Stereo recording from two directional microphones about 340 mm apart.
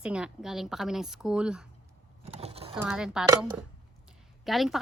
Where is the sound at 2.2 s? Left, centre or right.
Centre.